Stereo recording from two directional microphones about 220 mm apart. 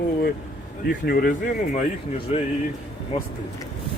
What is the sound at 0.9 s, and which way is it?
Speech, 45° left (ahead or behind).